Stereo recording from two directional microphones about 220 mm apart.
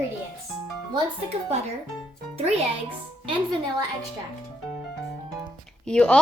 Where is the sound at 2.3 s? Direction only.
30° right (ahead or behind).